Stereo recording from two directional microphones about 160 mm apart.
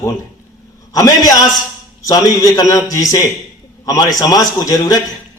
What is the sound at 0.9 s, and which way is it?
A man's voice, 20° left (ahead or behind).